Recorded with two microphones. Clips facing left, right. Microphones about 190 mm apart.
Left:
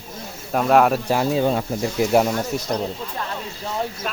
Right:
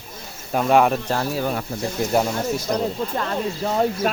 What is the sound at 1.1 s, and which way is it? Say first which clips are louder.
Speech: left 4 dB; 15° left (ahead or behind).